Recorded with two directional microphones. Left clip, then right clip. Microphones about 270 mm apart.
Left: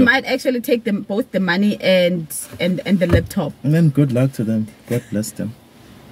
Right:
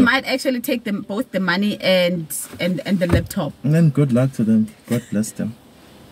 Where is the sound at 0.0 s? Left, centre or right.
Centre.